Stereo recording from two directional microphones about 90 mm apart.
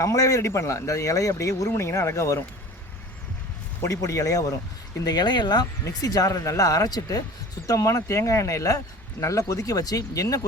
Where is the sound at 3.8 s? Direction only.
35° left (ahead or behind).